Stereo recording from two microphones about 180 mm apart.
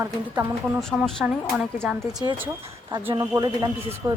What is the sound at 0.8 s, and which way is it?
Speech, 5° left (ahead or behind).